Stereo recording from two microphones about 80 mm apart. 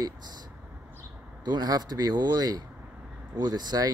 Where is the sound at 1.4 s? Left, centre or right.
Right.